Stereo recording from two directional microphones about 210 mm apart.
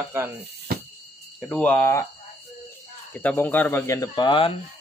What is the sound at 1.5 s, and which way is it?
Speech, 5° left (ahead or behind).